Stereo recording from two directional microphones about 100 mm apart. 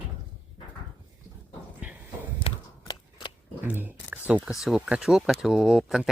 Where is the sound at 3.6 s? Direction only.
20° right (ahead or behind).